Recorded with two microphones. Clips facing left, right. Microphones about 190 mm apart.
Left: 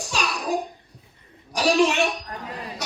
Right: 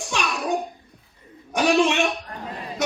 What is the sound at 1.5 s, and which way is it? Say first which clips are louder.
Speech: right 1 dB; 35° left (ahead or behind).